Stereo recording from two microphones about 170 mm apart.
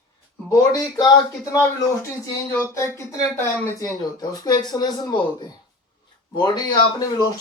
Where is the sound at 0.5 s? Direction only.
20° left (ahead or behind).